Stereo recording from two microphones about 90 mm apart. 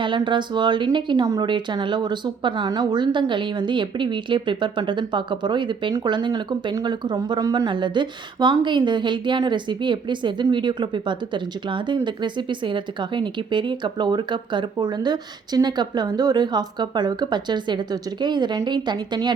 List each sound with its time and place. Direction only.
0.0 s speech: 60° right (ahead or behind)
1.2 s speech: 40° right (ahead or behind)
1.5 s speech: 60° right (ahead or behind); by 7.7 s 40° right (ahead or behind)
7.7 s speech: 60° right (ahead or behind)